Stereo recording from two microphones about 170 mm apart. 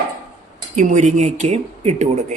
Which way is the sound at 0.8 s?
45° right (ahead or behind).